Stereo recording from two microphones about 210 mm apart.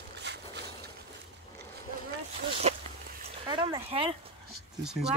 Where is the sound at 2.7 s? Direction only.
30° right (ahead or behind).